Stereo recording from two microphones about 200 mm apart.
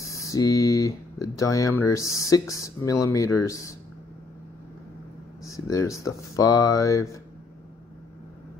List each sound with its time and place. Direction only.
0.1 s speech: 15° left (ahead or behind)
5.4 s speech: 15° left (ahead or behind)